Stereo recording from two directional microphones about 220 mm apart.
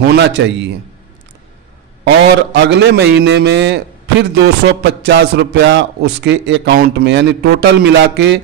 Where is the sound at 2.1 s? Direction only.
50° right (ahead or behind).